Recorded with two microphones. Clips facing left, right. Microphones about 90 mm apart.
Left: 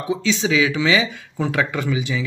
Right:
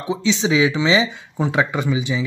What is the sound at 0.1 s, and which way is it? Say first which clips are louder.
Speech: right 1 dB; 20° right (ahead or behind).